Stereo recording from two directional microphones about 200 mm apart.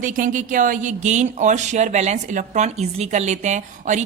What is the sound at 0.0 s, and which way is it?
Speech, 40° right (ahead or behind).